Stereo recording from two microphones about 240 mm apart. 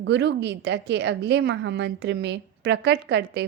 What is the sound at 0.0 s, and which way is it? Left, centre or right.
A woman's voice, right.